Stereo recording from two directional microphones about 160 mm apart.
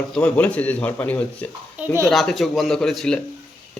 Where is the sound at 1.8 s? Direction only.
15° right (ahead or behind).